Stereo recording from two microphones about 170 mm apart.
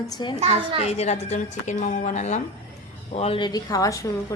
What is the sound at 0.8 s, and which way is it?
A woman's voice, 40° left (ahead or behind).